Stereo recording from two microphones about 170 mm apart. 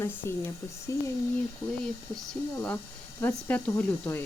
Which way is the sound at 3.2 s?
10° left (ahead or behind).